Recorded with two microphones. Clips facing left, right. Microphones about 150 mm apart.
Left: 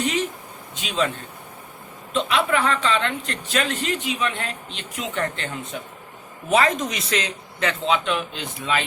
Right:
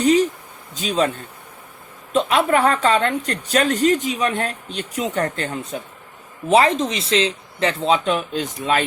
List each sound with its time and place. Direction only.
0.0 s a sound: 35° right (ahead or behind)
0.8 s speech: 40° right (ahead or behind)
2.1 s speech: 45° right (ahead or behind)